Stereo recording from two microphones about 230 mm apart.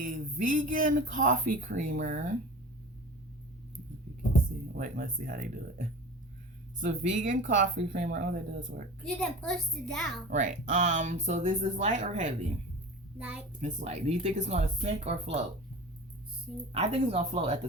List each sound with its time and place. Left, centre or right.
0.0 s speech: right
4.8 s speech: right
6.7 s speech: right
9.0 s a child's voice: centre
10.2 s speech: right
13.1 s a child's voice: centre
13.6 s speech: right
16.7 s speech: right